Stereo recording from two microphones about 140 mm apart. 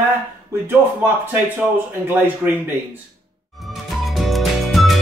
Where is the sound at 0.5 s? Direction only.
15° right (ahead or behind).